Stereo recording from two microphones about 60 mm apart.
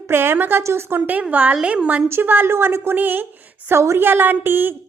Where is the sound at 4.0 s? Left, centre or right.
Right.